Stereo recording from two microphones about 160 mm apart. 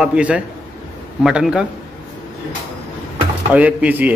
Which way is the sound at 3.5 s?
10° right (ahead or behind).